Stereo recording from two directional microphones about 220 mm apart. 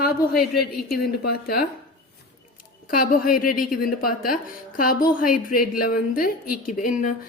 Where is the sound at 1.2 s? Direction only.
45° left (ahead or behind).